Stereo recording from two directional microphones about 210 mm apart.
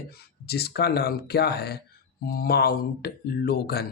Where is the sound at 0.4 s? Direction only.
50° left (ahead or behind).